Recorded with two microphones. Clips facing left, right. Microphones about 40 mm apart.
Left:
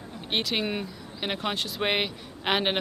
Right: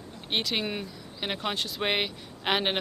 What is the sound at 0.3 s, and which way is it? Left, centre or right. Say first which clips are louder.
Speech: left 1 dB; centre.